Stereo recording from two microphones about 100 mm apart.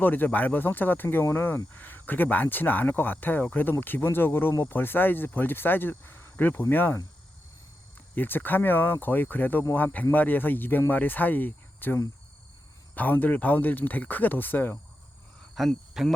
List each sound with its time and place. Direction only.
0.0 s speech: 20° left (ahead or behind)
8.1 s speech: 20° left (ahead or behind)
15.5 s speech: centre (ahead or behind)